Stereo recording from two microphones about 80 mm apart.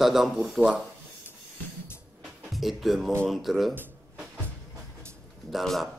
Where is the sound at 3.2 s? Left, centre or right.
Centre.